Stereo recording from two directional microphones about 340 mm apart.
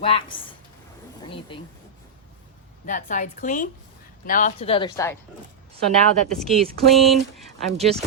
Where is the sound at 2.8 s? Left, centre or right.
Left.